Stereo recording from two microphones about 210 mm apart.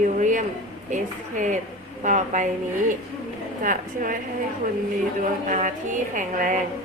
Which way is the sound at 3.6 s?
40° right (ahead or behind).